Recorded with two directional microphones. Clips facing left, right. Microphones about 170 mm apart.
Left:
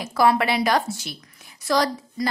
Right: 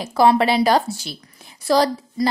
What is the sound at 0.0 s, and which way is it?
A woman's voice, 25° right (ahead or behind).